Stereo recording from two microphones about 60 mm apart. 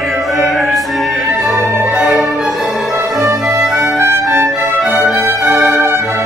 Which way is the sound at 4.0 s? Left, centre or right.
Right.